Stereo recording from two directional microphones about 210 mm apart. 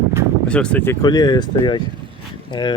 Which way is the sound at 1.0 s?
20° left (ahead or behind).